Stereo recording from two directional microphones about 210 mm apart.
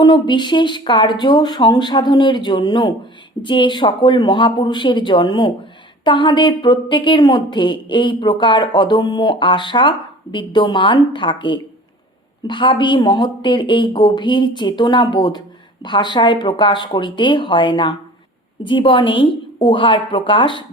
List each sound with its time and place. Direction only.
0.0 s speech: 20° left (ahead or behind)